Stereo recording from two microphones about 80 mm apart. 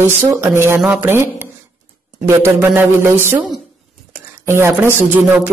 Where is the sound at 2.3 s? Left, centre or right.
Right.